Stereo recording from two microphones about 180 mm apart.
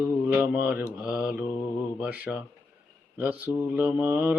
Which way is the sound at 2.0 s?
5° right (ahead or behind).